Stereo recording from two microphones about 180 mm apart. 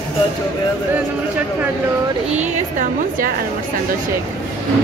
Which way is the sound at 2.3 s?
45° right (ahead or behind).